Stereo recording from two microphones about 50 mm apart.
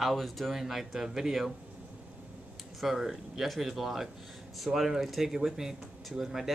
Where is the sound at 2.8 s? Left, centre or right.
Centre.